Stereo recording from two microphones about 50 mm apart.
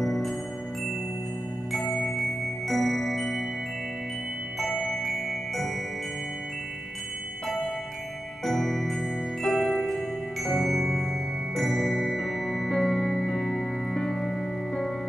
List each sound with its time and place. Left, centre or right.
0.0 s music: centre
1.7 s music: centre
2.0 s glockenspiel: centre
5.0 s glockenspiel: centre
8.5 s music: centre